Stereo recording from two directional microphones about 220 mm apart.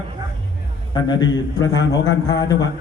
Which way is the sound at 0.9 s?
20° left (ahead or behind).